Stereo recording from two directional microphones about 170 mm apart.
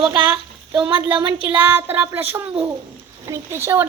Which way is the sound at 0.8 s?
30° right (ahead or behind).